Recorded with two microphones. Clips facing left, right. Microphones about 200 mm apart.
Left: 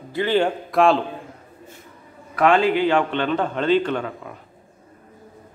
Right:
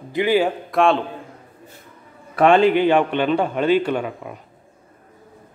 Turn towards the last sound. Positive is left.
turn(degrees=-15)  # may be behind; listen again after turning